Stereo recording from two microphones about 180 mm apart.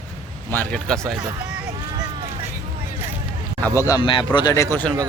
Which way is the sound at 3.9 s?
25° left (ahead or behind).